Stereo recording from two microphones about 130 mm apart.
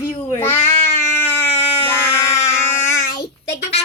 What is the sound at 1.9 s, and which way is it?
Child singing, 15° left (ahead or behind).